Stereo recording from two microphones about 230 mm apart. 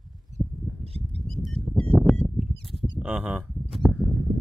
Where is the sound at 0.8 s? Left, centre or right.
Right.